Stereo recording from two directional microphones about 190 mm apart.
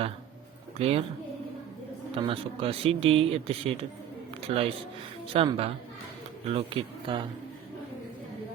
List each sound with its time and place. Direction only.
0.8 s speech: 30° right (ahead or behind)
2.1 s speech: 30° right (ahead or behind)